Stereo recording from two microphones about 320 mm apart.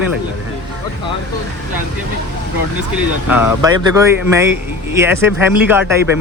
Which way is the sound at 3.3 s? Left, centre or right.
Centre.